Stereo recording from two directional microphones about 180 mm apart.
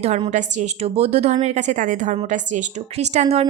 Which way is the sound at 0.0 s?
35° right (ahead or behind).